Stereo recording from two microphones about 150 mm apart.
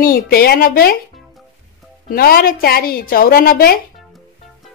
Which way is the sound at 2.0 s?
80° left.